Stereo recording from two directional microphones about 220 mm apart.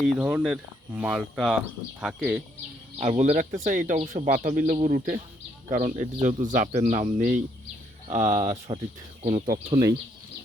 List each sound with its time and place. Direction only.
0.0 s speech: 5° right (ahead or behind)
3.0 s speech: 30° right (ahead or behind)